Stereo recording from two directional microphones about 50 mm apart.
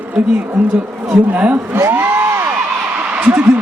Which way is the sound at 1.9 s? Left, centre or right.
Right.